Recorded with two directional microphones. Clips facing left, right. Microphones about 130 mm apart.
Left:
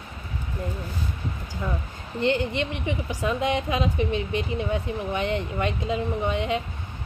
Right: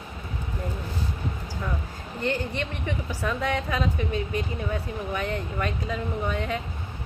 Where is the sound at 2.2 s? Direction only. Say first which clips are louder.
Left 4 dB; 20° left (ahead or behind).